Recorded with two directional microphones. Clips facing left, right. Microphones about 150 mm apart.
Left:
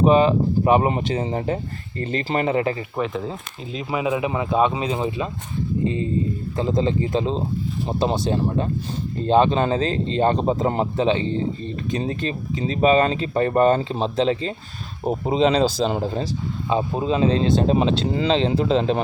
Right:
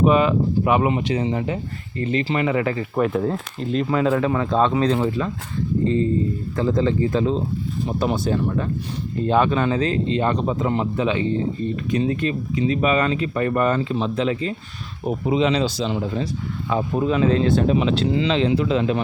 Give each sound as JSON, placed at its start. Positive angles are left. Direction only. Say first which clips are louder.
{"t": 0.0, "sound": "speech", "louder": "left 1 dB", "side_deg": 30}
{"t": 2.9, "sound": "speech", "louder": "right 5 dB", "side_deg": -5}
{"t": 16.6, "sound": "speech", "louder": "right 1 dB", "side_deg": 20}